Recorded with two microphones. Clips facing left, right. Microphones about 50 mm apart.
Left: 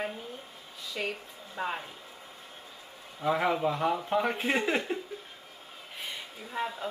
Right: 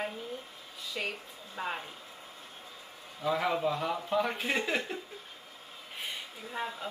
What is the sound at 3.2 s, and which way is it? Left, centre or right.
Speech, left.